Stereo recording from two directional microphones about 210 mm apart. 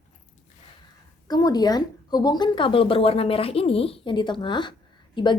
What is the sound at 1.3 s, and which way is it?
Speech, 20° left (ahead or behind).